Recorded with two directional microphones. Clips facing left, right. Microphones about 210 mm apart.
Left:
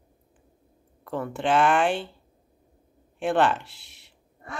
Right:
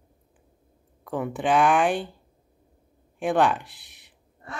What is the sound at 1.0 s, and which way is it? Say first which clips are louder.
Speech: right 1 dB; 15° right (ahead or behind).